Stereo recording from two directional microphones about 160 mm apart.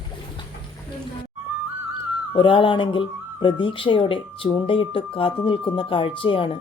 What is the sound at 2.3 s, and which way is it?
Speech, 30° left (ahead or behind).